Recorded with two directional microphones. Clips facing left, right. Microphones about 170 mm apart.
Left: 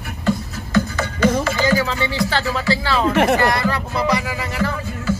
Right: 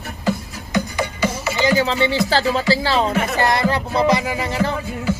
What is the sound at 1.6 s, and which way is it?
Speech, 25° right (ahead or behind).